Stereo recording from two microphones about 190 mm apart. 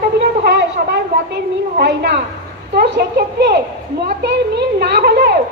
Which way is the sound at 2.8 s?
55° right (ahead or behind).